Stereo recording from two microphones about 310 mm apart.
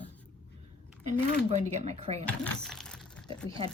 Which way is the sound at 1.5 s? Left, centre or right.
Right.